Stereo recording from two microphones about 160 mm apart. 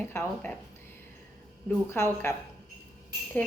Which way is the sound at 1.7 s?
15° left (ahead or behind).